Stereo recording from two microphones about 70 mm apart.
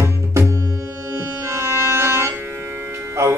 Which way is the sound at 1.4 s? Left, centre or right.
Right.